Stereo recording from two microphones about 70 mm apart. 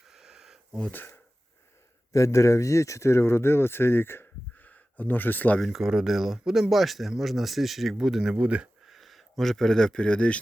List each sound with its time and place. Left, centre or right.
0.1 s a sound: centre
0.8 s speech: left
2.1 s speech: left
5.5 s speech: centre
8.9 s speech: centre